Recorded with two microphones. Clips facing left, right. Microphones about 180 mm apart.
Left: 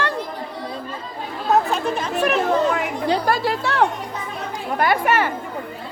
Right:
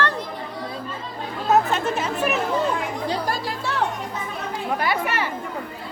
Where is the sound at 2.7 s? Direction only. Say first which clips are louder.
Left 4 dB; 65° left (ahead or behind).